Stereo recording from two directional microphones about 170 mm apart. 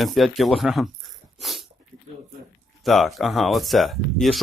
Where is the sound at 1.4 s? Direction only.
Centre (ahead or behind).